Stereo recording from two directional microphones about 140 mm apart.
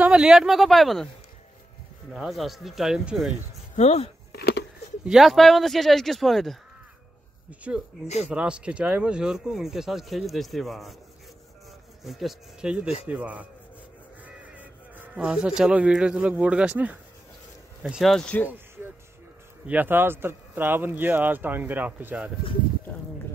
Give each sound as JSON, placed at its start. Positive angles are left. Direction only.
{"t": 0.0, "sound": "speech", "side_deg": -5}
{"t": 2.1, "sound": "speech", "side_deg": 0}
{"t": 3.7, "sound": "speech", "side_deg": 50}
{"t": 5.0, "sound": "speech", "side_deg": 0}
{"t": 7.7, "sound": "speech", "side_deg": -5}
{"t": 12.0, "sound": "speech", "side_deg": 0}
{"t": 19.6, "sound": "speech", "side_deg": -10}